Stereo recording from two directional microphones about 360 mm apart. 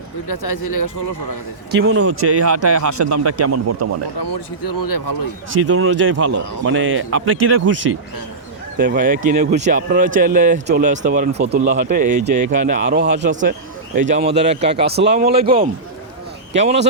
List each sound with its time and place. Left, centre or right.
0.3 s speech: left
1.7 s a man's voice: right
4.2 s speech: left
5.5 s a man's voice: right
8.8 s speech: right
15.4 s a man's voice: centre